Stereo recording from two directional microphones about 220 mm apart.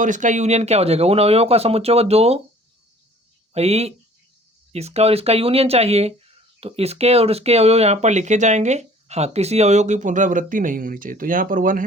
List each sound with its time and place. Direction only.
0.0 s speech: 35° right (ahead or behind)
3.5 s speech: 30° right (ahead or behind)